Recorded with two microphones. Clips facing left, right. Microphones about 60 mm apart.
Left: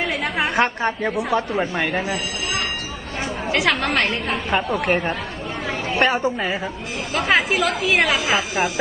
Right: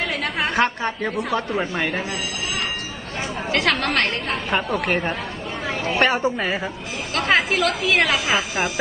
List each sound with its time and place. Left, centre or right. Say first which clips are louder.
0.1 s a sound: left 1 dB; centre
1.0 s a woman's voice: left 1 dB; centre
3.5 s a woman's voice: left 1 dB; centre